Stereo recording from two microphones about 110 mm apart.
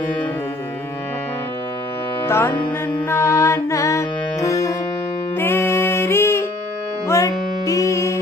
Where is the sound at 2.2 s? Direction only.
20° left (ahead or behind).